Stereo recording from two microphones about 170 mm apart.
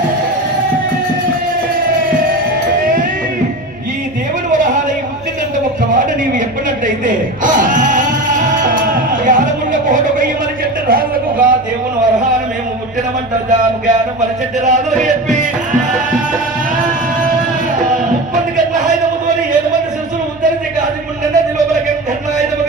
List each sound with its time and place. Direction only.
7.1 s music: 50° right (ahead or behind)
10.9 s a sound: 60° right (ahead or behind)
14.6 s speech: 45° right (ahead or behind)